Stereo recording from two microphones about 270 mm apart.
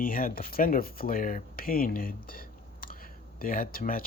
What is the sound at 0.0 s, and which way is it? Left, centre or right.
Speech, left.